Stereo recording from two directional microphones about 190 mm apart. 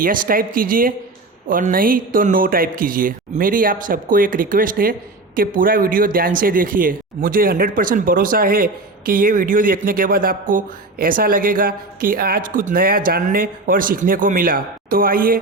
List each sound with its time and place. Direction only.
0.0 s speech: 45° right (ahead or behind)